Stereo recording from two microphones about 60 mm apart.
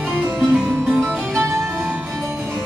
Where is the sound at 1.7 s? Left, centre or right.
Right.